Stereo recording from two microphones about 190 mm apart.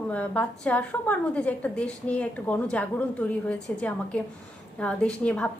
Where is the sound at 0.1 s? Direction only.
5° left (ahead or behind).